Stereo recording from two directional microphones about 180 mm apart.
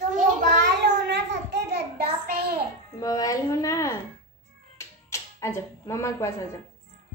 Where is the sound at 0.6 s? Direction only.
70° right (ahead or behind).